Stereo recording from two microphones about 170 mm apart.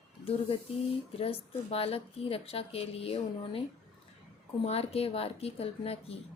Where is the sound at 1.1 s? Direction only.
35° left (ahead or behind).